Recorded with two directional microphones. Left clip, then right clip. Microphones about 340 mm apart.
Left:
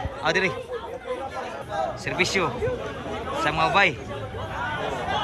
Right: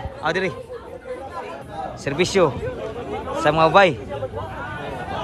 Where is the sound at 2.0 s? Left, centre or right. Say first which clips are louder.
Right 8 dB; centre.